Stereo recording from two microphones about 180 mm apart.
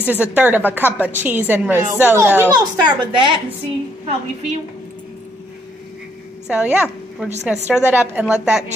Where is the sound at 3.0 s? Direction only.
30° right (ahead or behind).